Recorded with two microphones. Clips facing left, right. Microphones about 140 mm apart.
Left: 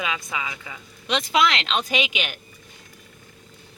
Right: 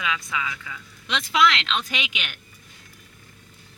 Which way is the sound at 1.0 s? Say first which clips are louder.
Even; 45° left (ahead or behind).